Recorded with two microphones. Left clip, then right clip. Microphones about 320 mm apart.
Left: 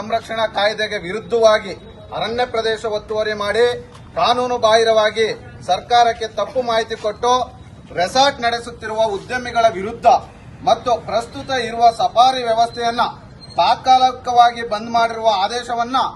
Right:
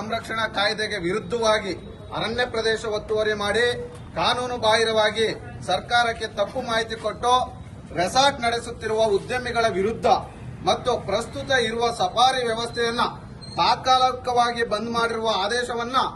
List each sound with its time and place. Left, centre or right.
0.1 s a man's voice: centre